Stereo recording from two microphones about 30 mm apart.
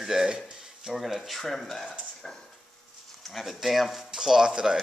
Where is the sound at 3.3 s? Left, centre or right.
Centre.